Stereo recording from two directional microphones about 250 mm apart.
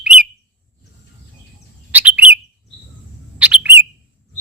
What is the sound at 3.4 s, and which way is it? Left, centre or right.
Bird, centre.